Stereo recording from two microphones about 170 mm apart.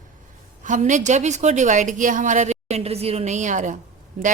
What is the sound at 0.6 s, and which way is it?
Speech, 45° right (ahead or behind).